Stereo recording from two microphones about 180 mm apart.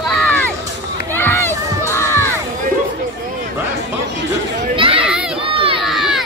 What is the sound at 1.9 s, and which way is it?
Crowd, 15° left (ahead or behind).